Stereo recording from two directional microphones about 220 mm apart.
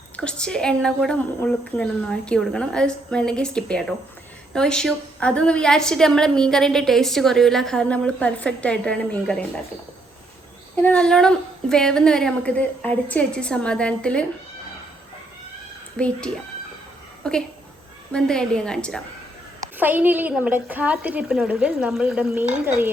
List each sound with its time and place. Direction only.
0.2 s a woman's voice: 5° left (ahead or behind)
10.8 s a woman's voice: 5° left (ahead or behind)
16.0 s a woman's voice: 5° left (ahead or behind)
19.5 s a woman's voice: 10° right (ahead or behind)